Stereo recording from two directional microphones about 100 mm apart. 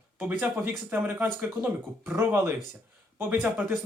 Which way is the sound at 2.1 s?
25° right (ahead or behind).